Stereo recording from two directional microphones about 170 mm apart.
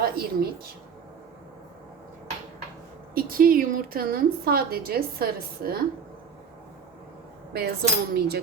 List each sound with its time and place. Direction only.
0.0 s a woman's voice: 65° right (ahead or behind)
3.2 s a woman's voice: 60° right (ahead or behind)
7.5 s cutlery: 65° right (ahead or behind)